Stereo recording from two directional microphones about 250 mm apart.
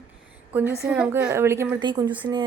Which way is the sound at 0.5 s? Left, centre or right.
Centre.